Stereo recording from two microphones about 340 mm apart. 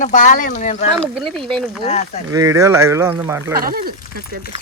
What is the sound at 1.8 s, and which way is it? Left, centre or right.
Speech, centre.